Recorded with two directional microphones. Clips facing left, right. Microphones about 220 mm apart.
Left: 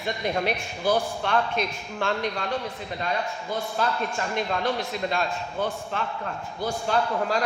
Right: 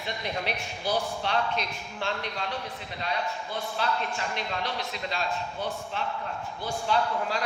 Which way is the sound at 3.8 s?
45° left (ahead or behind).